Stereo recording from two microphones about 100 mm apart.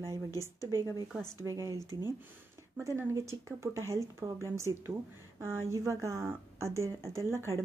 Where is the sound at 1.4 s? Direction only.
30° right (ahead or behind).